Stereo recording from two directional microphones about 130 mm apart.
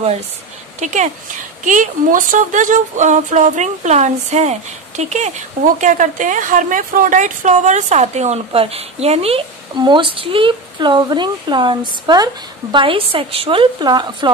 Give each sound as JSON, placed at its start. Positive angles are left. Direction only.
{"t": 0.7, "sound": "speech", "side_deg": -65}
{"t": 1.6, "sound": "speech", "side_deg": -85}
{"t": 5.8, "sound": "speech", "side_deg": -80}
{"t": 9.8, "sound": "a woman's voice", "side_deg": -40}